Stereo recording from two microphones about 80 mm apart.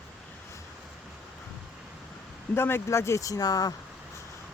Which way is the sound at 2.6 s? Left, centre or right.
Left.